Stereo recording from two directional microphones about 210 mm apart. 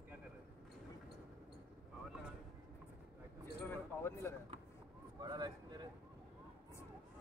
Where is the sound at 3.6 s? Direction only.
10° left (ahead or behind).